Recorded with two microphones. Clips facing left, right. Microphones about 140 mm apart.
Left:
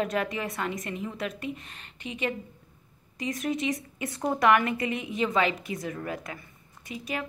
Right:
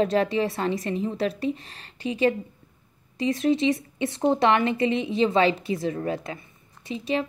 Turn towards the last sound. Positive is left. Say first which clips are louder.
# right 7 dB
turn(degrees=-25)  # may be behind; listen again after turning